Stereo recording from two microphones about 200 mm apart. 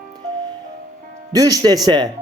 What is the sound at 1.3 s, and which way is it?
Speech, 15° right (ahead or behind).